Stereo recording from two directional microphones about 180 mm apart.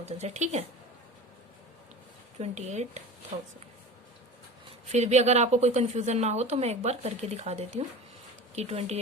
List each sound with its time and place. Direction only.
0.0 s a woman's voice: 35° right (ahead or behind)
2.4 s a woman's voice: 40° right (ahead or behind)
4.9 s a woman's voice: 40° right (ahead or behind)